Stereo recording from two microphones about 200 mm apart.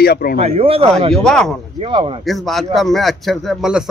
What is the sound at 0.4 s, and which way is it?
Speech, 30° right (ahead or behind).